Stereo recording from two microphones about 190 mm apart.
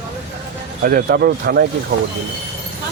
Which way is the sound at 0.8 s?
55° right (ahead or behind).